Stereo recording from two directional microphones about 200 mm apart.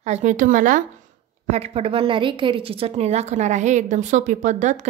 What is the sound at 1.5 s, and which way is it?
A woman's voice, 30° right (ahead or behind).